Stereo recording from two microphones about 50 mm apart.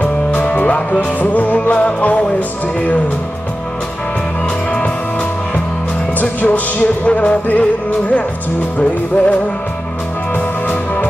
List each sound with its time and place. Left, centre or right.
0.0 s music: left
6.1 s music: left
8.7 s music: left